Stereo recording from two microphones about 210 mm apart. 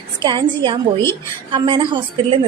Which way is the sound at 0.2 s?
20° right (ahead or behind).